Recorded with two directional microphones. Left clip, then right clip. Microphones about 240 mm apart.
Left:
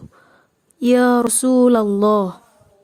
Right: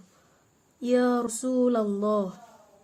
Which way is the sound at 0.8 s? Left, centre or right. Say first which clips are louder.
Left 10 dB; left.